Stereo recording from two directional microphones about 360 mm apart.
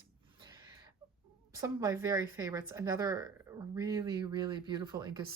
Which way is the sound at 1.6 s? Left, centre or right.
Centre.